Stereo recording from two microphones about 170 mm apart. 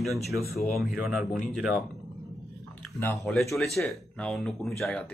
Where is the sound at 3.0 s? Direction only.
15° left (ahead or behind).